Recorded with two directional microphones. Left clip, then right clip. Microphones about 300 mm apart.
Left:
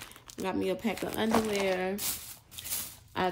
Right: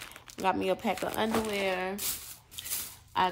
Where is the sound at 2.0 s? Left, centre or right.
Left.